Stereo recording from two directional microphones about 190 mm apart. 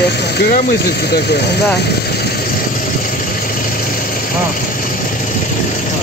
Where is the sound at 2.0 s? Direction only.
55° left (ahead or behind).